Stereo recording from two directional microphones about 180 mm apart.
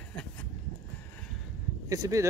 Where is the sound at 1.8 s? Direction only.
15° right (ahead or behind).